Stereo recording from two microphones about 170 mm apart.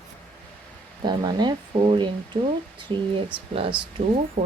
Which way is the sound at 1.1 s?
25° right (ahead or behind).